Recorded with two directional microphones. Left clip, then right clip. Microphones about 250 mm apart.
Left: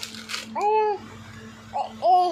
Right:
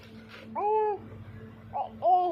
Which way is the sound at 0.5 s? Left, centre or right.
Left.